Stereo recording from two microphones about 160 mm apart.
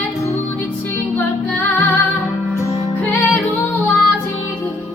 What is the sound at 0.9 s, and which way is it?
Music, 10° left (ahead or behind).